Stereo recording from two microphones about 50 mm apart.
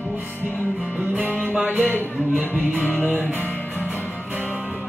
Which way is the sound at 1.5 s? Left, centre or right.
Right.